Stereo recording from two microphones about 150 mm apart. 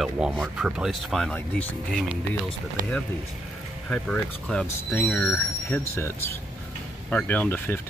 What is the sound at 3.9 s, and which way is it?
Speech, 5° left (ahead or behind).